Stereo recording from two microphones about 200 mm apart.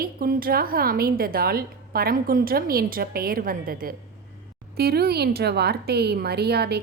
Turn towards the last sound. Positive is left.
turn(degrees=-55)  # may be behind; listen again after turning